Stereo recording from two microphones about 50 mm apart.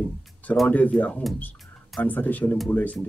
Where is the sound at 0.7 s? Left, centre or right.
Left.